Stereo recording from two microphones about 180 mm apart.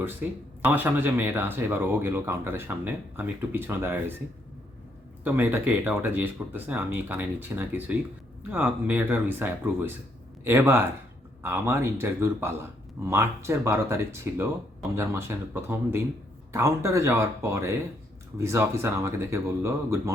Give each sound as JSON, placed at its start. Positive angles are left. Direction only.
{"t": 0.0, "sound": "speech", "side_deg": -10}
{"t": 5.2, "sound": "speech", "side_deg": -10}